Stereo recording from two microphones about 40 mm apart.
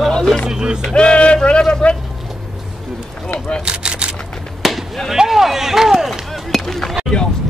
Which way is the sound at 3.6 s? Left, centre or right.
Right.